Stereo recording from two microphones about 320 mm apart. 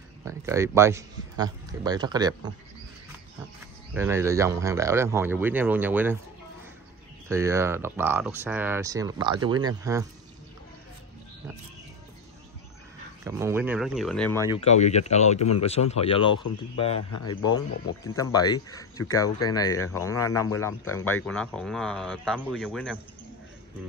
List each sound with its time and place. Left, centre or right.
0.2 s speech: centre
3.9 s speech: centre
7.2 s speech: centre
13.2 s speech: centre
14.5 s speech: centre